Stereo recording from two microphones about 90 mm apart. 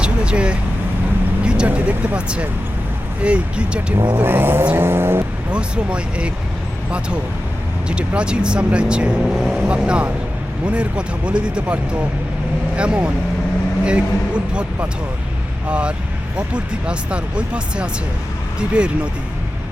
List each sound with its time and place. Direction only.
0.0 s vehicle: 10° right (ahead or behind)
1.5 s speech: 15° right (ahead or behind)
4.1 s speech: 25° right (ahead or behind)
5.5 s speech: 10° right (ahead or behind)
7.9 s speech: 10° right (ahead or behind)